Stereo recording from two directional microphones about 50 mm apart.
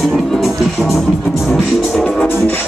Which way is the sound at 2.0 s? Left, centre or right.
Centre.